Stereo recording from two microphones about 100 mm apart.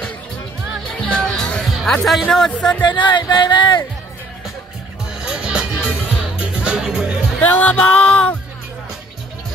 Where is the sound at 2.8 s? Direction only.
50° left (ahead or behind).